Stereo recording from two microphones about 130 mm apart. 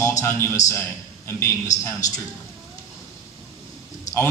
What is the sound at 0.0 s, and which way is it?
A man's voice, 20° left (ahead or behind).